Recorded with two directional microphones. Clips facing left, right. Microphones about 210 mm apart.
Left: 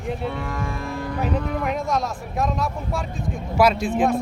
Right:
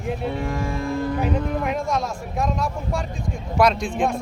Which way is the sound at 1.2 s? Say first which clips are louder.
Right 1 dB; centre (ahead or behind).